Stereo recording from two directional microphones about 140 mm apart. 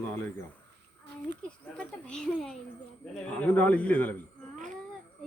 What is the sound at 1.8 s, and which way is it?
A man's voice, 5° left (ahead or behind).